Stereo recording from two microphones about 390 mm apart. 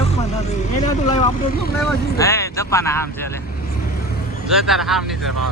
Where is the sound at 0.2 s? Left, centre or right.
Centre.